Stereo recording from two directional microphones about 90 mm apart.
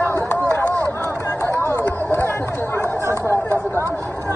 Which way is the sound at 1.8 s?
25° left (ahead or behind).